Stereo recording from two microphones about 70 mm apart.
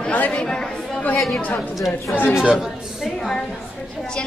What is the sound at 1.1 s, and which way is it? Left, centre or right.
Speech, centre.